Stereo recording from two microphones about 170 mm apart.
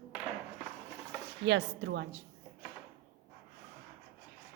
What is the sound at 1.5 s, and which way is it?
Speech, 90° right.